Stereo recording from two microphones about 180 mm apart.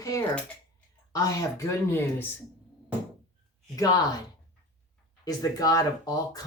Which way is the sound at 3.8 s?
20° left (ahead or behind).